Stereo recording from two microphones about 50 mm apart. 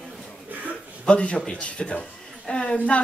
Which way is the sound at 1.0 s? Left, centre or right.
Centre.